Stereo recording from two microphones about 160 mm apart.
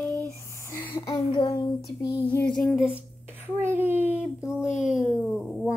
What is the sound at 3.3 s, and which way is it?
A child's voice, 10° right (ahead or behind).